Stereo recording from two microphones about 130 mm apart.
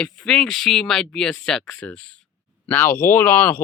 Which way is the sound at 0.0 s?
5° left (ahead or behind).